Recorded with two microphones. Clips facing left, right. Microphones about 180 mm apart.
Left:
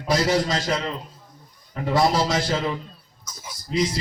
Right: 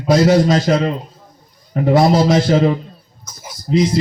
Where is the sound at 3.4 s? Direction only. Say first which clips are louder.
Right 8 dB; 50° right (ahead or behind).